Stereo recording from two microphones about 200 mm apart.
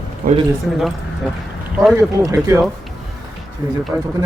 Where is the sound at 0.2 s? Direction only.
50° right (ahead or behind).